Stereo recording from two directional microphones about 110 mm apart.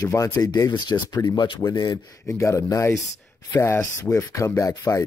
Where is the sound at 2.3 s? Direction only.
25° left (ahead or behind).